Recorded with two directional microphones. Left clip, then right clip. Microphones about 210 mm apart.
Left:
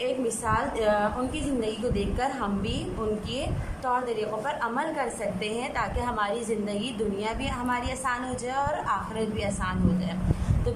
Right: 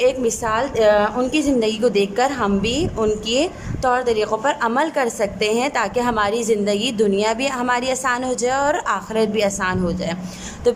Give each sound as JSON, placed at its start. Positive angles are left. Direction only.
{"t": 0.0, "sound": "a woman's voice", "side_deg": -45}
{"t": 3.8, "sound": "a woman's voice", "side_deg": -50}